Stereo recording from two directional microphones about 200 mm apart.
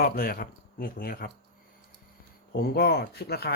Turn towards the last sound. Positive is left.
turn(degrees=55)  # may be behind; listen again after turning